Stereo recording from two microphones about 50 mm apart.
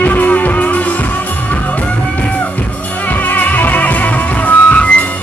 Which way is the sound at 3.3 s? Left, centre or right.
Left.